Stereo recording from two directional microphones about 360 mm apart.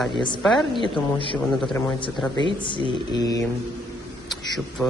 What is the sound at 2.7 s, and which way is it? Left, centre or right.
Mantra, centre.